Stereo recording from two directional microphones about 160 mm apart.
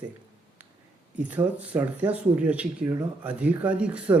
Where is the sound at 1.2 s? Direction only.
10° right (ahead or behind).